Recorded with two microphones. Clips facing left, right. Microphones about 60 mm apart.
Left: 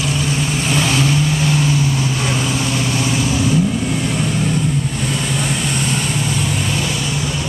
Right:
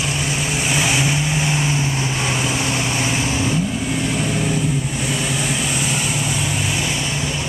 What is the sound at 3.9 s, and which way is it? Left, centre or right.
Vehicle, centre.